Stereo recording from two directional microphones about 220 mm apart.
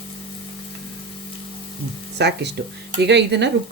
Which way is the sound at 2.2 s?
50° right (ahead or behind).